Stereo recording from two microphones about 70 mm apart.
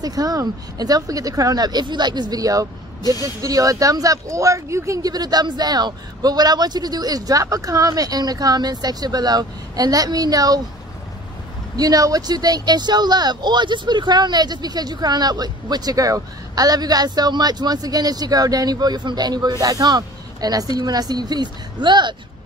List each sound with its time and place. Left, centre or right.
0.0 s speech: right
11.7 s speech: right
19.6 s speech: right